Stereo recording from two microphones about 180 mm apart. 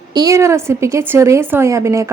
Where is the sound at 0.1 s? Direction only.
20° right (ahead or behind).